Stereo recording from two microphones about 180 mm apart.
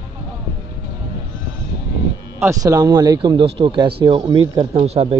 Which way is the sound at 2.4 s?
15° right (ahead or behind).